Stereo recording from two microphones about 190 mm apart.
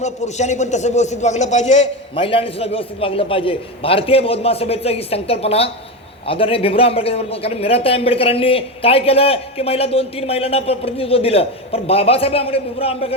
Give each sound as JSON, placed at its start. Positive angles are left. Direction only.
{"t": 0.0, "sound": "a man's voice", "side_deg": 35}